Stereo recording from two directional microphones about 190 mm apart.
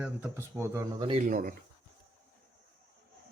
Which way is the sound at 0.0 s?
10° right (ahead or behind).